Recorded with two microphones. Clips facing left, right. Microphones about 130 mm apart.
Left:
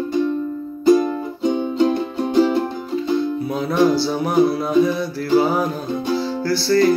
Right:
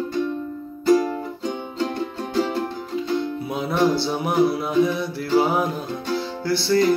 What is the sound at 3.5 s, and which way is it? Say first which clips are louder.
Music: left 3 dB; 20° right (ahead or behind).